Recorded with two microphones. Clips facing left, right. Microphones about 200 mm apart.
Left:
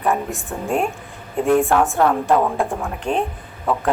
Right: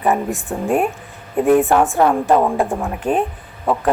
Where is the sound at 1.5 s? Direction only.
Centre (ahead or behind).